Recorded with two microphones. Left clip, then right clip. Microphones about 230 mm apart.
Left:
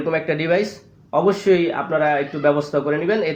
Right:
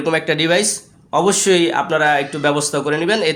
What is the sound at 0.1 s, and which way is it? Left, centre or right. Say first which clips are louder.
Speech: right 4 dB; right.